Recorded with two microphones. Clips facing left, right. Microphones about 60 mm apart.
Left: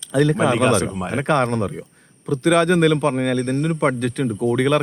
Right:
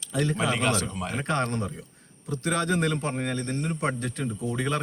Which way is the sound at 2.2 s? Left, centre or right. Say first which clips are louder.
Left 10 dB; left.